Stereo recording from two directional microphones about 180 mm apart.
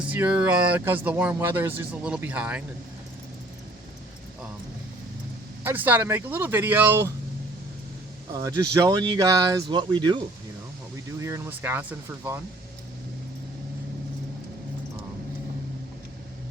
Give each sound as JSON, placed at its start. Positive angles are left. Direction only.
{"t": 0.0, "sound": "speech", "side_deg": -10}
{"t": 5.6, "sound": "speech", "side_deg": -10}
{"t": 8.3, "sound": "speech", "side_deg": -20}
{"t": 11.2, "sound": "speech", "side_deg": -15}